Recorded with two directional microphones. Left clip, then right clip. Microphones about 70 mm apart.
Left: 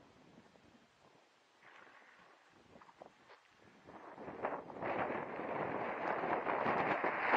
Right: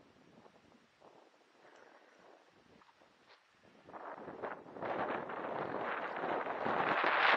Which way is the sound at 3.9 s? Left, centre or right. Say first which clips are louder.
Right 6 dB; right.